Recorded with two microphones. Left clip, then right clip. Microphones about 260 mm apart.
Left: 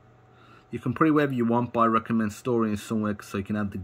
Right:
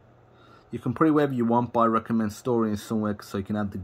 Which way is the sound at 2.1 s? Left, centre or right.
Left.